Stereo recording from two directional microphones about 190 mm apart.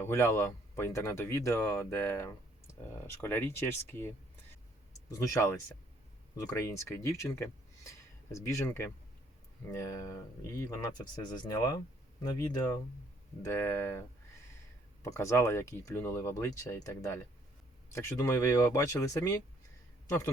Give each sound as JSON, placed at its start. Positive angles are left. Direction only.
{"t": 0.0, "sound": "speech", "side_deg": 15}
{"t": 5.1, "sound": "speech", "side_deg": 15}
{"t": 13.4, "sound": "speech", "side_deg": 15}
{"t": 15.1, "sound": "a man's voice", "side_deg": 15}